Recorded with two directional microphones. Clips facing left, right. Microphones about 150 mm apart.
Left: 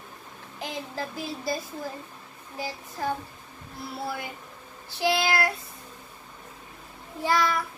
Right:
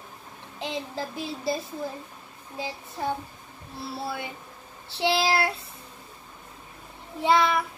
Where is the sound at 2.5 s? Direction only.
20° right (ahead or behind).